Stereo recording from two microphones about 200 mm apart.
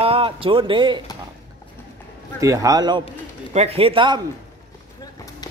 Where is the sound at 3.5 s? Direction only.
30° right (ahead or behind).